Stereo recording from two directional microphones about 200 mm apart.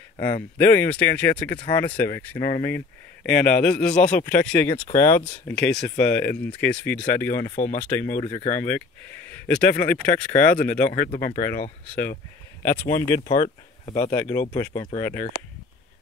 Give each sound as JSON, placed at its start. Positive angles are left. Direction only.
{"t": 0.6, "sound": "speech", "side_deg": 10}
{"t": 7.5, "sound": "speech", "side_deg": 45}
{"t": 7.9, "sound": "speech", "side_deg": 10}
{"t": 8.2, "sound": "speech", "side_deg": 20}
{"t": 8.5, "sound": "speech", "side_deg": 10}
{"t": 12.6, "sound": "speech", "side_deg": 15}